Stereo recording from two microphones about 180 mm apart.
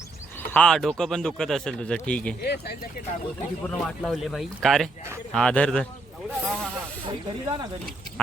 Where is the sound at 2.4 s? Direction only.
65° left (ahead or behind).